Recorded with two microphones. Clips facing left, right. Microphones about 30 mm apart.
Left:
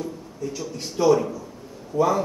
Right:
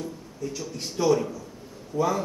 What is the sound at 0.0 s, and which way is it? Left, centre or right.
A man's voice, centre.